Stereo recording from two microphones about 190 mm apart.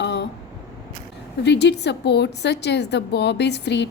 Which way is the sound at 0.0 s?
65° left (ahead or behind).